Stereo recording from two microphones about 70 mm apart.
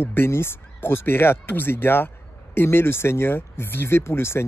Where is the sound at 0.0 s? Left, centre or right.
Left.